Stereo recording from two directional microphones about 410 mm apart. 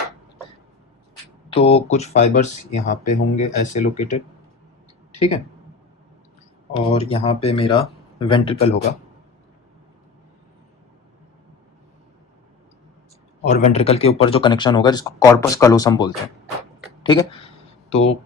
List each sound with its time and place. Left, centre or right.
1.5 s speech: centre
6.7 s speech: centre
13.4 s speech: centre
17.0 s a sound: centre